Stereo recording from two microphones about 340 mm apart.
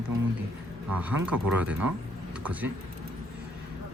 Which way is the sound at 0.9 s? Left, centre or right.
Centre.